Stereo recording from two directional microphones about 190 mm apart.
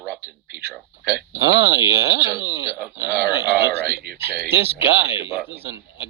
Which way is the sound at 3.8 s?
55° right (ahead or behind).